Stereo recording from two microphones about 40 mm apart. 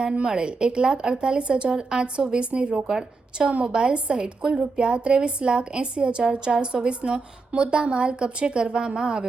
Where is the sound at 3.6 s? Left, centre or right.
Right.